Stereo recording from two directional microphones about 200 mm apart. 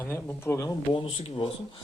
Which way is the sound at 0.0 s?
10° left (ahead or behind).